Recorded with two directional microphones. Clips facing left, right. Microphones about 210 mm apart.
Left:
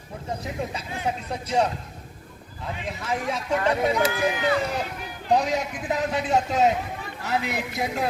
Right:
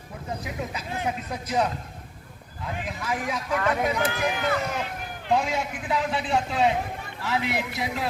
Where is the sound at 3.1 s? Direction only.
25° left (ahead or behind).